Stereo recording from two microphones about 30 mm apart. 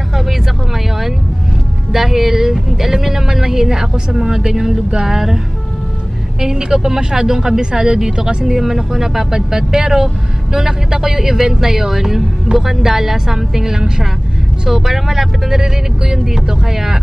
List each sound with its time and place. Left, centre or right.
1.9 s speech: centre
6.4 s speech: right
8.6 s speech: centre